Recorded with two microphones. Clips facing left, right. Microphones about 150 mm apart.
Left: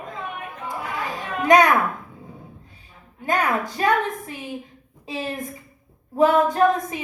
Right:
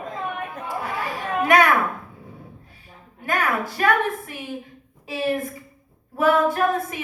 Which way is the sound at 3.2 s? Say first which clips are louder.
Left 2 dB; 20° left (ahead or behind).